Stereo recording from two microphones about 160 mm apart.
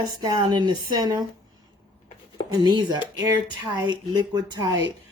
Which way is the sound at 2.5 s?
30° right (ahead or behind).